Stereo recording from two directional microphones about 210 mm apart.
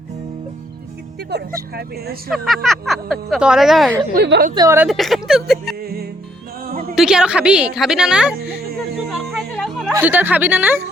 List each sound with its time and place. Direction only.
1.3 s speech: 50° right (ahead or behind)
2.3 s speech: centre (ahead or behind)
4.1 s speech: 50° right (ahead or behind)
4.5 s a woman's voice: 15° right (ahead or behind)
4.9 s speech: centre (ahead or behind)
6.9 s speech: 5° right (ahead or behind)
9.0 s music: centre (ahead or behind)
9.9 s a woman's voice: 10° right (ahead or behind)